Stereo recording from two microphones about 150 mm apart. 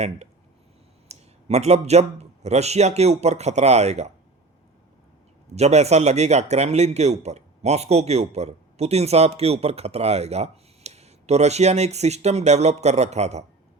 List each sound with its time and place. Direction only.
1.5 s speech: 45° right (ahead or behind)
5.5 s speech: 45° right (ahead or behind)